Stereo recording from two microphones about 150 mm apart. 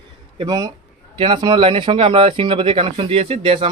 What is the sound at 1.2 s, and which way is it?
Speech, 30° right (ahead or behind).